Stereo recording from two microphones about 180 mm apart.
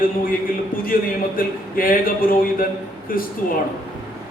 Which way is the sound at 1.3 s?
50° left (ahead or behind).